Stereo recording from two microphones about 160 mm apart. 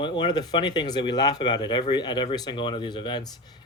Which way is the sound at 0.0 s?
30° left (ahead or behind).